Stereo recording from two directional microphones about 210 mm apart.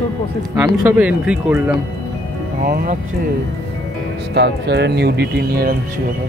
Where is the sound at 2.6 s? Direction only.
45° right (ahead or behind).